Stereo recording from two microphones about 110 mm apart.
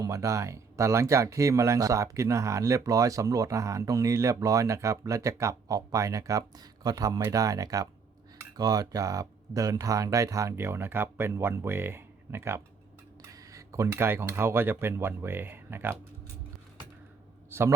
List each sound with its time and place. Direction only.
0.0 s speech: 30° right (ahead or behind)
17.5 s a man's voice: 25° right (ahead or behind)